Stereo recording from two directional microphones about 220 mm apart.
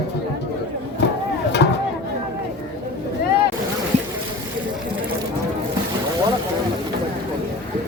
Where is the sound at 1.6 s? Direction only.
50° left (ahead or behind).